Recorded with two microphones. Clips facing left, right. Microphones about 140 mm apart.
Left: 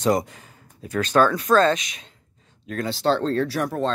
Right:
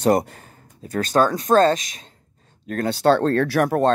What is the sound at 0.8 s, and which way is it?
Speech, 45° right (ahead or behind).